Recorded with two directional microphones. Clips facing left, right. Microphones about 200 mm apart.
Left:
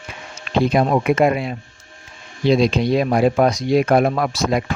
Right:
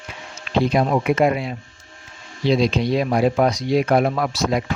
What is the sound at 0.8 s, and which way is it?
Speech, 55° left (ahead or behind).